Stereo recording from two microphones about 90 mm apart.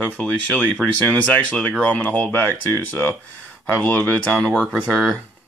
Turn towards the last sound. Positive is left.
turn(degrees=5)  # may be behind; listen again after turning